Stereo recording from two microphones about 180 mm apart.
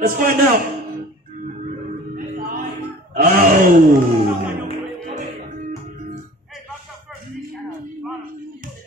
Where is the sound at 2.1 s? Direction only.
50° right (ahead or behind).